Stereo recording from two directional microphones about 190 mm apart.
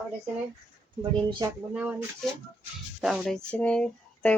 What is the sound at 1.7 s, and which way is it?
Speech, 5° right (ahead or behind).